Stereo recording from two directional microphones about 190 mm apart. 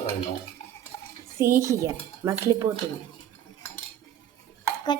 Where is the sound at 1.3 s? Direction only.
15° right (ahead or behind).